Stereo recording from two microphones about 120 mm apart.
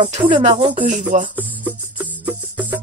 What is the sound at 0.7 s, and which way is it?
Speech, 90° right.